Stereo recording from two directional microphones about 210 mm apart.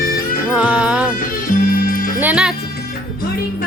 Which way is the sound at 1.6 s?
40° left (ahead or behind).